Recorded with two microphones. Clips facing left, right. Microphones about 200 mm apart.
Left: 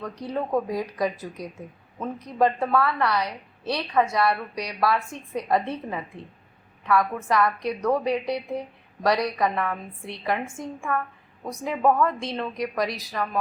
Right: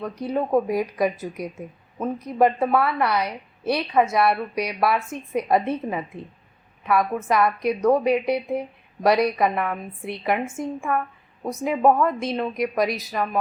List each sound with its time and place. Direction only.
0.0 s a woman's voice: 20° right (ahead or behind)